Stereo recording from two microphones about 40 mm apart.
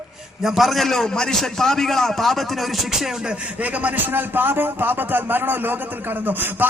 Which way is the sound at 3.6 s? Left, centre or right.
Right.